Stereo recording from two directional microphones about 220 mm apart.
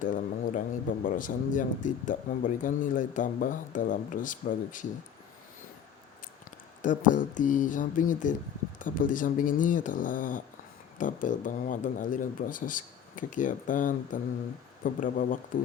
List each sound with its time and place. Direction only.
0.0 s speech: 35° left (ahead or behind)
6.8 s speech: 35° left (ahead or behind)